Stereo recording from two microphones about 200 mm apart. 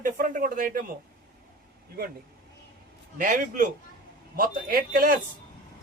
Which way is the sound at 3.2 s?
40° right (ahead or behind).